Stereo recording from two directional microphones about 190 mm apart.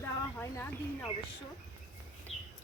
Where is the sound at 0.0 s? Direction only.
10° left (ahead or behind).